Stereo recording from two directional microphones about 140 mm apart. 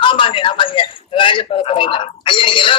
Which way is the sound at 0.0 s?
40° left (ahead or behind).